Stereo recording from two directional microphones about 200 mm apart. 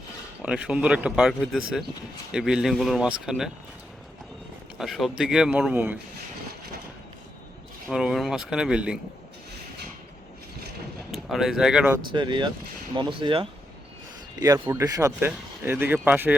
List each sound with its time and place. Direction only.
0.4 s speech: 5° right (ahead or behind)
4.8 s speech: centre (ahead or behind)
7.9 s speech: 5° right (ahead or behind)
11.1 s speech: centre (ahead or behind)
12.1 s speech: 25° right (ahead or behind)